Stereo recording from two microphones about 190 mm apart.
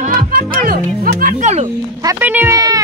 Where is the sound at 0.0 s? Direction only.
45° right (ahead or behind).